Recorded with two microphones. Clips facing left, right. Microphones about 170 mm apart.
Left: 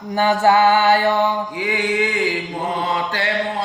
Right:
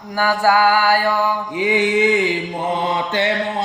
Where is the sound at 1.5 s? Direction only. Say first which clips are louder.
Right 4 dB; 20° right (ahead or behind).